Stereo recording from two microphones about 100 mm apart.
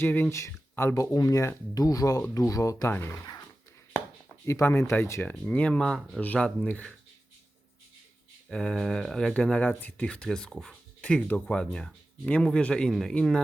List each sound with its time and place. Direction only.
0.0 s speech: 20° left (ahead or behind)
4.4 s speech: 25° left (ahead or behind)
5.2 s speech: 15° left (ahead or behind)
8.4 s speech: 5° left (ahead or behind)